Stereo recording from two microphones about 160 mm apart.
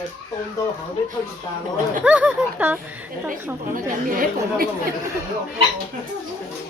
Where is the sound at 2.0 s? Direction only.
10° right (ahead or behind).